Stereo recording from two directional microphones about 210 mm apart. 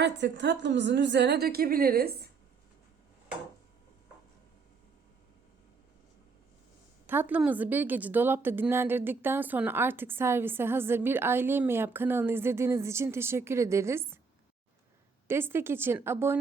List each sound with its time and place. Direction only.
0.0 s a woman's voice: 55° right (ahead or behind)
7.1 s a woman's voice: 10° right (ahead or behind)
15.3 s a woman's voice: 10° right (ahead or behind)